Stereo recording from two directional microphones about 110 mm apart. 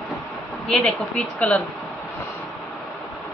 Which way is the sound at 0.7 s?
5° left (ahead or behind).